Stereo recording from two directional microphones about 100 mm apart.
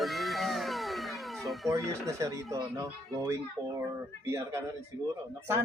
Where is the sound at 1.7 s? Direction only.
30° right (ahead or behind).